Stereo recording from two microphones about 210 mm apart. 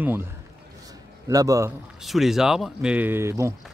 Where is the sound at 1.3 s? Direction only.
15° right (ahead or behind).